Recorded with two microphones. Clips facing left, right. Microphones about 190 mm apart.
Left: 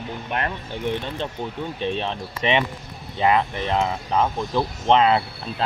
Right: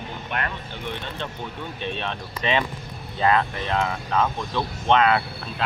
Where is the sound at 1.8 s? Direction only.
30° left (ahead or behind).